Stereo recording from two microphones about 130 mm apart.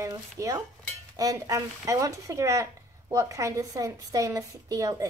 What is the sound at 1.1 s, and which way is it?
Speech, 25° right (ahead or behind).